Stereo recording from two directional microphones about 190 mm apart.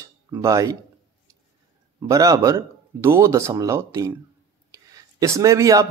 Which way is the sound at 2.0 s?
15° right (ahead or behind).